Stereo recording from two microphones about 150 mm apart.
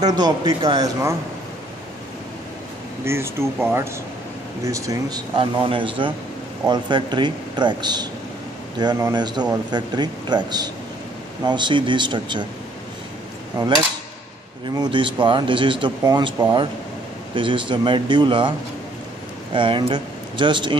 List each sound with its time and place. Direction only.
0.0 s a man's voice: 30° right (ahead or behind)
3.1 s a man's voice: 15° right (ahead or behind)
5.3 s a man's voice: 35° right (ahead or behind)
13.6 s a man's voice: 25° right (ahead or behind)
14.8 s speech: 35° right (ahead or behind)
17.4 s speech: 35° right (ahead or behind)
19.5 s speech: 35° right (ahead or behind)